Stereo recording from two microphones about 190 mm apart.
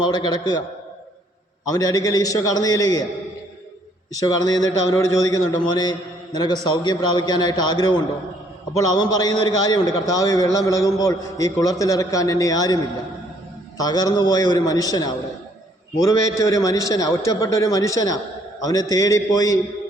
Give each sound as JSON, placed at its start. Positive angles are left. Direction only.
{"t": 0.0, "sound": "a man's voice", "side_deg": 20}
{"t": 1.6, "sound": "a man's voice", "side_deg": 20}
{"t": 4.1, "sound": "a man's voice", "side_deg": 20}